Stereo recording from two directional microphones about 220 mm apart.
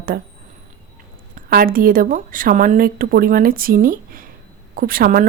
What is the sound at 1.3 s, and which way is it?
A woman's voice, 40° right (ahead or behind).